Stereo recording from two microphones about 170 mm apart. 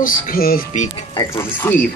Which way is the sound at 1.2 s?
20° left (ahead or behind).